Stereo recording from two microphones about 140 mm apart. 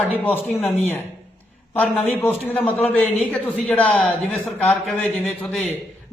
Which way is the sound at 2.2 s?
10° left (ahead or behind).